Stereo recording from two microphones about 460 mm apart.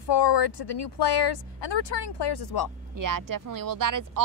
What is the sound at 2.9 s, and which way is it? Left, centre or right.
Speech, right.